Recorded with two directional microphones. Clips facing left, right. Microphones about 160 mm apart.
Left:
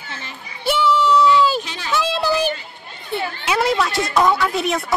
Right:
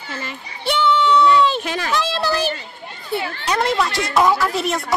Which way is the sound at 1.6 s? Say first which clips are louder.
Right 7 dB; 50° right (ahead or behind).